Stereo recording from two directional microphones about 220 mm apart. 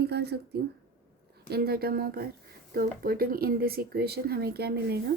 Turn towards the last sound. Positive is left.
turn(degrees=-45)  # may be behind; listen again after turning